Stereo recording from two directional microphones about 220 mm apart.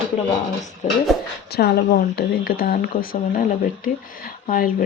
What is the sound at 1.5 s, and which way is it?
Speech, 45° left (ahead or behind).